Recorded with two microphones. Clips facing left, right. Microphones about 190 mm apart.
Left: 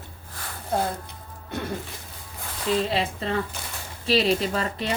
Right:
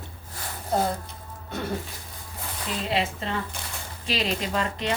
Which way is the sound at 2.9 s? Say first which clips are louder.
Left 1 dB; 35° left (ahead or behind).